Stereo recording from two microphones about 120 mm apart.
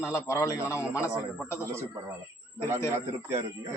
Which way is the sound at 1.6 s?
25° right (ahead or behind).